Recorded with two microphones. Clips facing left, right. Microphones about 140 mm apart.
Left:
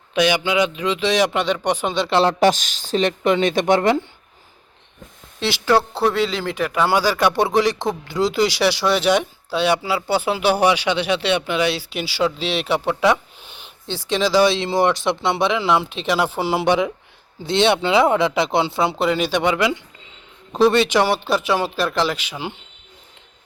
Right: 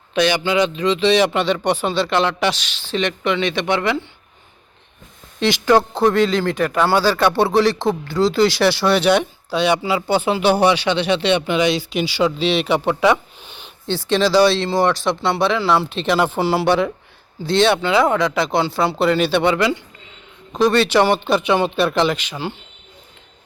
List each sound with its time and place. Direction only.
0.1 s speech: 10° left (ahead or behind)
2.0 s speech: 35° left (ahead or behind)
5.4 s speech: 5° left (ahead or behind)